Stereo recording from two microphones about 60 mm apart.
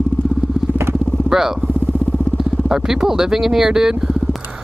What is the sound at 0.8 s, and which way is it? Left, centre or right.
Vehicle, right.